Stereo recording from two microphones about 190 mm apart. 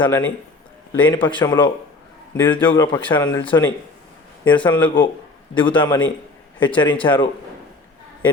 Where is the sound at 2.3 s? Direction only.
10° left (ahead or behind).